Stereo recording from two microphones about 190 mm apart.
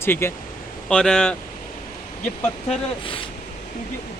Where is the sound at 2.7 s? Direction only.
30° left (ahead or behind).